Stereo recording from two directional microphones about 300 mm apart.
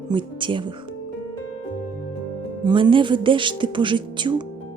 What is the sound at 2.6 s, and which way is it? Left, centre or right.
Speech, centre.